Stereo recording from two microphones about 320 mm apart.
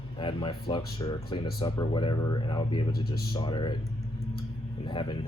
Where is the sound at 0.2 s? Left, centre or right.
Centre.